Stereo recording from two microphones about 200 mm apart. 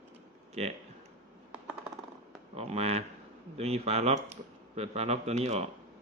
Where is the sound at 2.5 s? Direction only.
30° right (ahead or behind).